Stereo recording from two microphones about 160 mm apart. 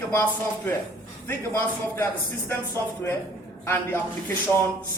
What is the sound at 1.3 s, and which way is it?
Speech, 15° left (ahead or behind).